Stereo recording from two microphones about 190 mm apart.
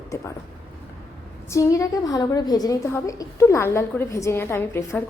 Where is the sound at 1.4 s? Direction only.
15° left (ahead or behind).